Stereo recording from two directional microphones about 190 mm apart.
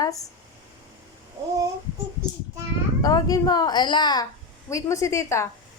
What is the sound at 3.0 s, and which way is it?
A woman's voice, 20° left (ahead or behind).